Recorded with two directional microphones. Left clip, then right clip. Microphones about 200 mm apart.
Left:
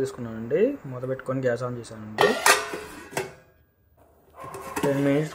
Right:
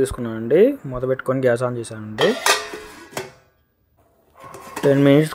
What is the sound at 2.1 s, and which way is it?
Music, centre (ahead or behind).